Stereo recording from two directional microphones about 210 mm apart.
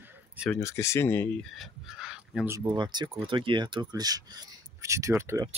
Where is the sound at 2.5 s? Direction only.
20° right (ahead or behind).